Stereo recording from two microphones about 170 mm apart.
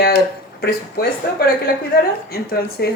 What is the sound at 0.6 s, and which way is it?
Speech, 65° left (ahead or behind).